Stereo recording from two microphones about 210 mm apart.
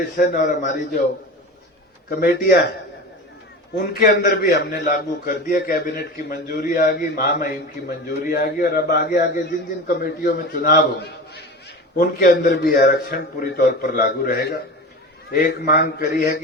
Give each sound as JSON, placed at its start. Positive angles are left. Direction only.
{"t": 0.0, "sound": "a man's voice", "side_deg": 40}
{"t": 2.0, "sound": "a man's voice", "side_deg": 50}
{"t": 3.8, "sound": "a man's voice", "side_deg": 45}